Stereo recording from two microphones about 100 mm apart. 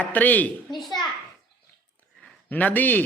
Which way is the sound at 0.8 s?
Centre (ahead or behind).